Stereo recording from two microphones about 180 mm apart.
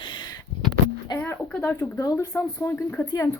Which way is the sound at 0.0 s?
25° left (ahead or behind).